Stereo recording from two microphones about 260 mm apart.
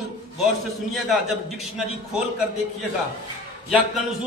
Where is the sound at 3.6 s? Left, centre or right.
Centre.